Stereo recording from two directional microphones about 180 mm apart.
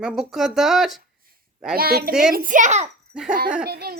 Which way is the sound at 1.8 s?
60° right (ahead or behind).